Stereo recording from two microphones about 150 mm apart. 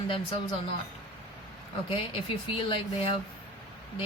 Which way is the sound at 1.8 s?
35° left (ahead or behind).